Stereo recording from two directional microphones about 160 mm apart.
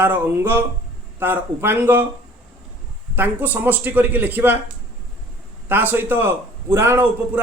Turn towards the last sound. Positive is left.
turn(degrees=-15)  # may be behind; listen again after turning